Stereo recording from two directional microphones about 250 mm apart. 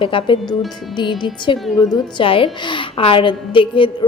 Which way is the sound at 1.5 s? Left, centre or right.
Centre.